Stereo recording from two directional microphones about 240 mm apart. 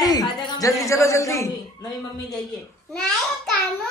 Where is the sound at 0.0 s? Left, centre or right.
Centre.